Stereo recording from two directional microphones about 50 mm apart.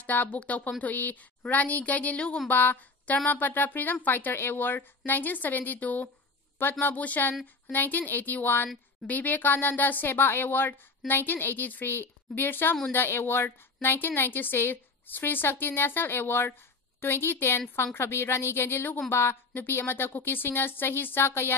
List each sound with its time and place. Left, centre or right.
0.0 s a woman's voice: left
2.4 s a woman's voice: left
6.6 s a woman's voice: left
19.5 s a woman's voice: left